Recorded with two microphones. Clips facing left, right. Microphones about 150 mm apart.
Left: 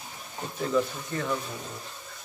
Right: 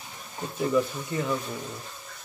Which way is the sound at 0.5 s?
10° right (ahead or behind).